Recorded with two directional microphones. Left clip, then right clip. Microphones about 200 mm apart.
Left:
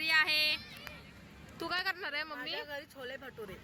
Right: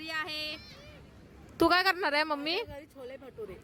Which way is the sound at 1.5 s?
60° right (ahead or behind).